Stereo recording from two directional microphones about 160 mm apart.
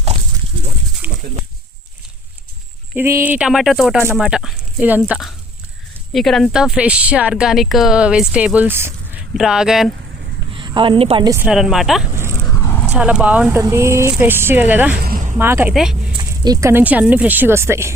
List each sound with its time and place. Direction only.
1.0 s a sound: 10° right (ahead or behind)
2.9 s speech: 15° right (ahead or behind)
10.5 s a woman's voice: 30° right (ahead or behind)
11.4 s speech: centre (ahead or behind)
12.6 s dog: 15° left (ahead or behind)
12.9 s speech: 5° right (ahead or behind)
14.9 s a sound: 65° right (ahead or behind)
15.4 s speech: 15° right (ahead or behind)
15.7 s speech: centre (ahead or behind)
16.1 s speech: 25° right (ahead or behind)